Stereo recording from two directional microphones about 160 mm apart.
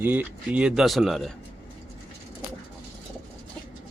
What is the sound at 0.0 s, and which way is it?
Speech, 10° right (ahead or behind).